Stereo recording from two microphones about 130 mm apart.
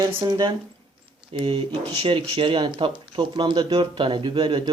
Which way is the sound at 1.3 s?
45° right (ahead or behind).